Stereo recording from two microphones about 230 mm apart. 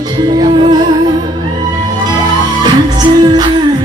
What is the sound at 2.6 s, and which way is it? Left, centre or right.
Music, centre.